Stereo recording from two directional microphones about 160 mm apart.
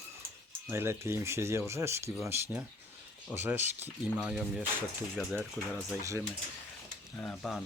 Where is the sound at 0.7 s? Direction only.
15° right (ahead or behind).